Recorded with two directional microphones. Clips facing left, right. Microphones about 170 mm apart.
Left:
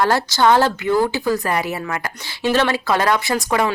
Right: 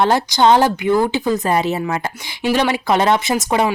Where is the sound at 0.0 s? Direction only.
20° right (ahead or behind).